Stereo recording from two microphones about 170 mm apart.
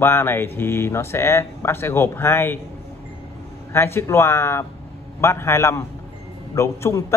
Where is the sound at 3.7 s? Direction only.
15° left (ahead or behind).